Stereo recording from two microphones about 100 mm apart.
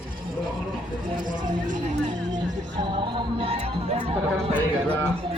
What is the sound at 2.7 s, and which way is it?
Music, 55° right (ahead or behind).